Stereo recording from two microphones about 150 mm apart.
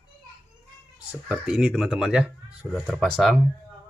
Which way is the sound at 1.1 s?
5° right (ahead or behind).